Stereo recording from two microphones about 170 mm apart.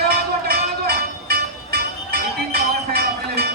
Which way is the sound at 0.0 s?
65° right (ahead or behind).